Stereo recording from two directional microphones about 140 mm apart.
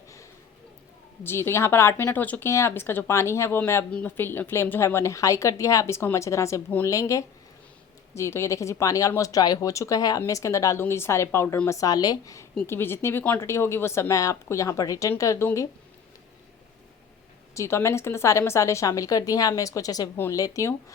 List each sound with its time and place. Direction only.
1.2 s speech: 15° left (ahead or behind)
11.7 s speech: 25° left (ahead or behind)
17.5 s speech: 20° left (ahead or behind)